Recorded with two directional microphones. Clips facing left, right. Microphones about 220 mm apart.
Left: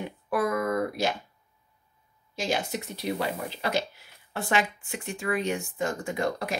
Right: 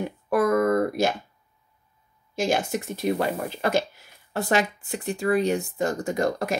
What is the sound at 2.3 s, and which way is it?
Speech, 50° right (ahead or behind).